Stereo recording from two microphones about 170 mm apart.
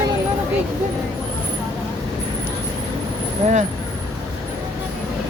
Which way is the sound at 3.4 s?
40° right (ahead or behind).